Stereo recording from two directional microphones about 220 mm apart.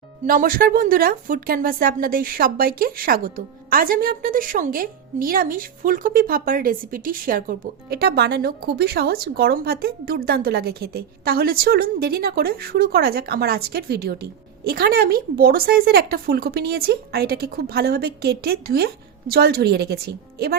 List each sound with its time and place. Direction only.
0.3 s a woman's voice: 40° right (ahead or behind)